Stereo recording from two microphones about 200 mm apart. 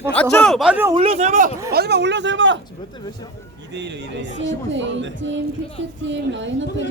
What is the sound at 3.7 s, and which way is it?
A woman's voice, 60° right (ahead or behind).